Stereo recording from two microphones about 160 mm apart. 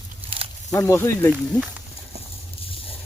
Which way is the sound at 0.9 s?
15° left (ahead or behind).